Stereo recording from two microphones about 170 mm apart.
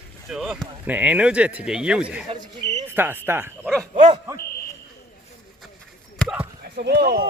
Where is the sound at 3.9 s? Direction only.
45° right (ahead or behind).